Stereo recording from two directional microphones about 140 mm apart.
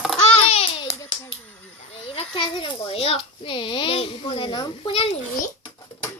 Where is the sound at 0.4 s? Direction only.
45° left (ahead or behind).